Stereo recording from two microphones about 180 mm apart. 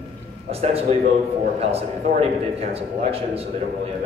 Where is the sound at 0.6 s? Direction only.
35° right (ahead or behind).